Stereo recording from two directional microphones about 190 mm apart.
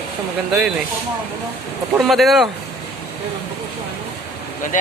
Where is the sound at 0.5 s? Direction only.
5° right (ahead or behind).